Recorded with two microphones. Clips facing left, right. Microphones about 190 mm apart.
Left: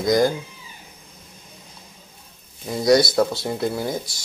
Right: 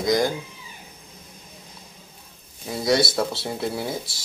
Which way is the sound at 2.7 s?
Centre (ahead or behind).